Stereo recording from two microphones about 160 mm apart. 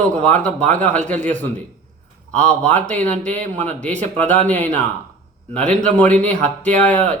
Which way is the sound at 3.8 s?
10° left (ahead or behind).